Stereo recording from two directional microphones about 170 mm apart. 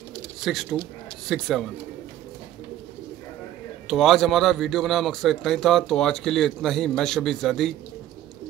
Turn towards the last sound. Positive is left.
turn(degrees=0)  # may be behind; listen again after turning